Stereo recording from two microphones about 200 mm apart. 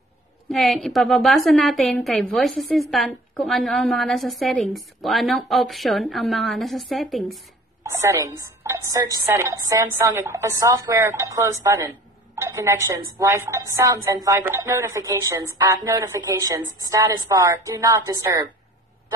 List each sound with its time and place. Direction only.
0.5 s a woman's voice: centre (ahead or behind)
7.8 s a woman's voice: 15° right (ahead or behind)